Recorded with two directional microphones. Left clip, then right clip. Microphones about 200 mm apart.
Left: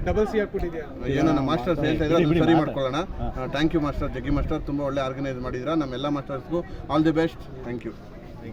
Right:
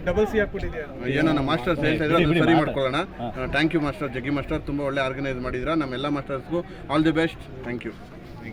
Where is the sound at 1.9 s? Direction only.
15° right (ahead or behind).